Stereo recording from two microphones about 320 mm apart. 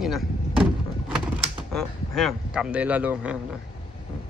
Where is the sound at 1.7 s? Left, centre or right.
Centre.